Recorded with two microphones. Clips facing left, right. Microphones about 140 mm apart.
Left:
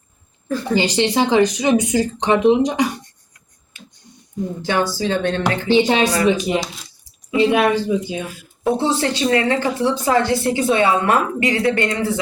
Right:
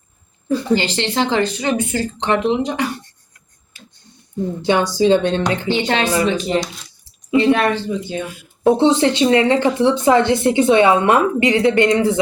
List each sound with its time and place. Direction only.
0.7 s speech: 15° left (ahead or behind)
4.6 s speech: 20° right (ahead or behind)
5.7 s speech: 15° left (ahead or behind)
8.8 s speech: 20° right (ahead or behind)